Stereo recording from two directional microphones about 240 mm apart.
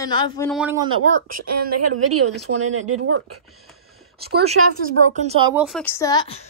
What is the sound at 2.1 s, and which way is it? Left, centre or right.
Speech, right.